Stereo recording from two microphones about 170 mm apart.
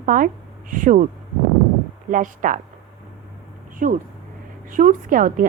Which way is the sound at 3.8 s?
50° right (ahead or behind).